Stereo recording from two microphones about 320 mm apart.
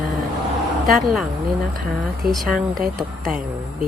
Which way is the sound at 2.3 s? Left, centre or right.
Centre.